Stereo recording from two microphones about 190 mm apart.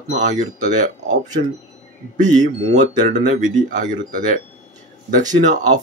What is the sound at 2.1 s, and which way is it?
Speech, 40° right (ahead or behind).